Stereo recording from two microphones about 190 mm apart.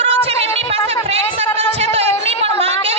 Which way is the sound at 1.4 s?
35° right (ahead or behind).